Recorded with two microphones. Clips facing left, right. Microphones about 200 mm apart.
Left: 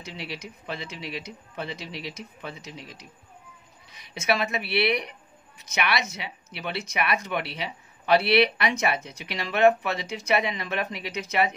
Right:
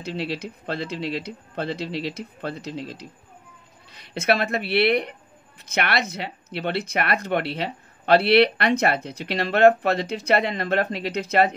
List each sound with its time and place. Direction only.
0.0 s speech: 60° right (ahead or behind)